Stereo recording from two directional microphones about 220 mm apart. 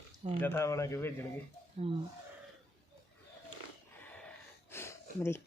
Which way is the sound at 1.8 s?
25° right (ahead or behind).